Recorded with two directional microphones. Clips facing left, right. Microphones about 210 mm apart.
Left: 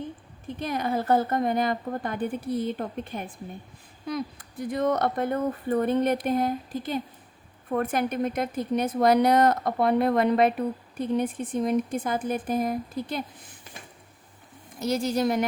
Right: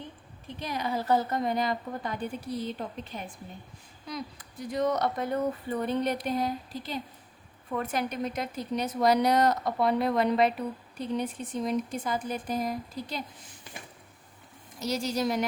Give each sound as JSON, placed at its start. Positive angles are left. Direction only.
{"t": 0.6, "sound": "speech", "side_deg": 50}
{"t": 14.8, "sound": "speech", "side_deg": 55}